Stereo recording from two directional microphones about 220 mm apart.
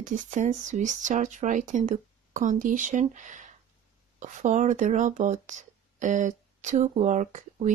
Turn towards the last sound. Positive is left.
turn(degrees=-35)  # may be behind; listen again after turning